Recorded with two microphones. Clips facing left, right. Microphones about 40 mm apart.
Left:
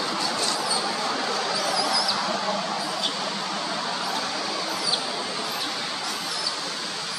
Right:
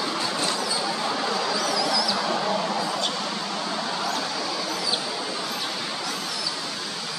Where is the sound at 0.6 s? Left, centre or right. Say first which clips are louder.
Even; centre.